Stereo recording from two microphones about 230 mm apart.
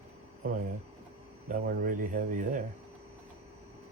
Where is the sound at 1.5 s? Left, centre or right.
Right.